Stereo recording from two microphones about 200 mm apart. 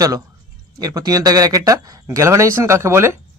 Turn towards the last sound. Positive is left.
turn(degrees=-15)  # may be behind; listen again after turning